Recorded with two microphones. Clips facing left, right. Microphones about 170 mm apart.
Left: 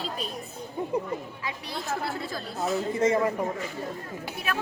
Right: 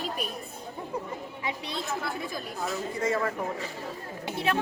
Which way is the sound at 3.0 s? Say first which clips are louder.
Left 4 dB; 20° left (ahead or behind).